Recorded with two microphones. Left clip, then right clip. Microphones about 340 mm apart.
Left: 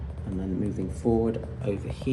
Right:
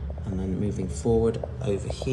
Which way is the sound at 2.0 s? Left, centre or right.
Left.